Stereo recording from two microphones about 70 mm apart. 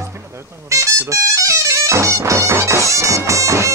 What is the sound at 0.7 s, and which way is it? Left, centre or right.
Music, right.